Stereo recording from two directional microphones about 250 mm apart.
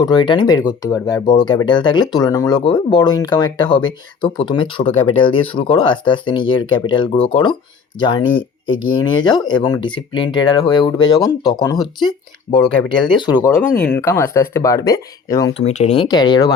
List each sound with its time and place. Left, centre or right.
0.0 s speech: centre
8.4 s speech: left
8.9 s speech: centre
15.6 s speech: left